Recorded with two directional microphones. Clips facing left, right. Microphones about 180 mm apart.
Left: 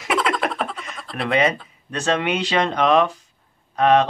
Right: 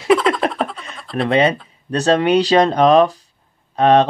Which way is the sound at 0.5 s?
Centre (ahead or behind).